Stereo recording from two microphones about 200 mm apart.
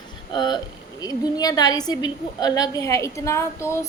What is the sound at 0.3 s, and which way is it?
A woman's voice, 20° left (ahead or behind).